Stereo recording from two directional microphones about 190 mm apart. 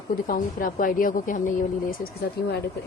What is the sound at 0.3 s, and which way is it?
Speech, 45° left (ahead or behind).